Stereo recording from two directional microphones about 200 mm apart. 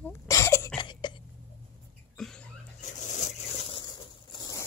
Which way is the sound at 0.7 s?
20° left (ahead or behind).